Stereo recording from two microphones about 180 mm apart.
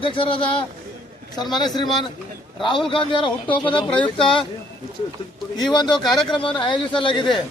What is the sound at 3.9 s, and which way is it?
Speech, 5° left (ahead or behind).